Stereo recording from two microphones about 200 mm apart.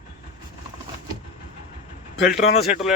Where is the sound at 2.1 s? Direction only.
60° left (ahead or behind).